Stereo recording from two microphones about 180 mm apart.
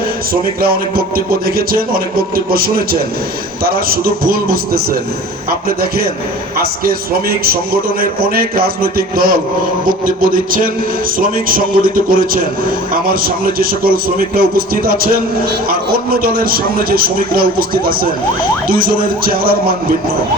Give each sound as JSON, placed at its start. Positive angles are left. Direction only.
{"t": 0.6, "sound": "a man's voice", "side_deg": -55}